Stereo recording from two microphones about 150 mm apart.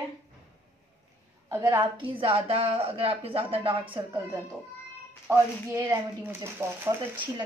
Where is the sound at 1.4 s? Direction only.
30° right (ahead or behind).